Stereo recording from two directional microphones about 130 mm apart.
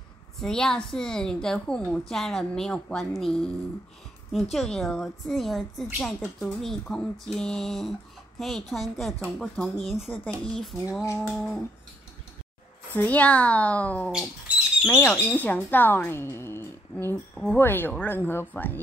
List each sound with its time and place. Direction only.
0.4 s a woman's voice: 5° left (ahead or behind)
10.9 s a sound: 20° left (ahead or behind)
11.1 s a woman's voice: 5° right (ahead or behind)
12.9 s speech: 10° left (ahead or behind)